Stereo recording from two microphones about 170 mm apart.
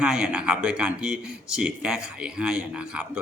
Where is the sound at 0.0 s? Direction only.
5° right (ahead or behind).